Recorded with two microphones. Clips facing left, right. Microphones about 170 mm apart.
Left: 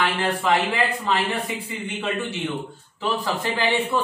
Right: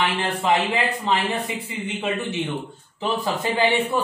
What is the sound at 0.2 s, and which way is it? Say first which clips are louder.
A man's voice: even; 20° right (ahead or behind).